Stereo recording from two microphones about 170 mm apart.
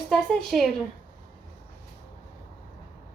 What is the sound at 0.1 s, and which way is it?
Speech, centre (ahead or behind).